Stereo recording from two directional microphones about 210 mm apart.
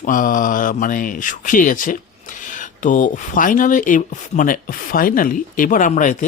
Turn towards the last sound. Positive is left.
turn(degrees=35)  # may be behind; listen again after turning